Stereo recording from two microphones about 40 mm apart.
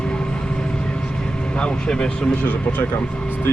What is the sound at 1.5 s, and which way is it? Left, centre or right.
Speech, left.